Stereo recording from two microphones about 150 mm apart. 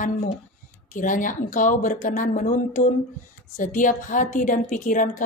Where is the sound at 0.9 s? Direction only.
60° left (ahead or behind).